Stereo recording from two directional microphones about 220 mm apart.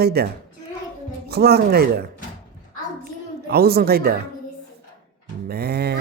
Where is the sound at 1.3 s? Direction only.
45° right (ahead or behind).